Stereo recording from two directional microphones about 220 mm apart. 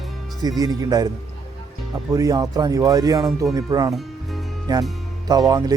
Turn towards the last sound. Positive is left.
turn(degrees=-15)  # may be behind; listen again after turning